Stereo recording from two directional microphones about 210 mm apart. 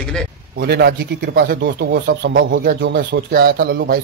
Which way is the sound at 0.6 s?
50° right (ahead or behind).